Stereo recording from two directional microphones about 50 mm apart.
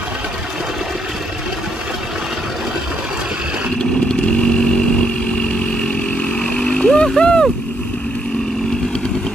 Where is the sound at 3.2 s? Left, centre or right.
Centre.